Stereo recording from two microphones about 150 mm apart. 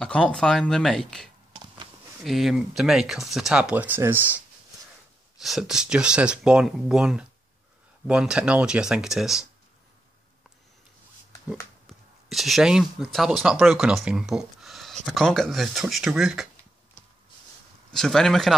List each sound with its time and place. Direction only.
0.0 s speech: 5° left (ahead or behind); by 4.4 s 15° right (ahead or behind)
5.4 s speech: centre (ahead or behind)
12.3 s speech: centre (ahead or behind)
17.9 s speech: 5° left (ahead or behind)